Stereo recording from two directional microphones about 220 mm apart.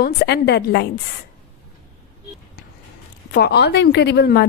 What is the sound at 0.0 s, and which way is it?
Speech, 50° left (ahead or behind).